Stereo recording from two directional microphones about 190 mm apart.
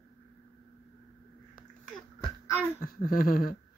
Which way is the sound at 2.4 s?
15° left (ahead or behind).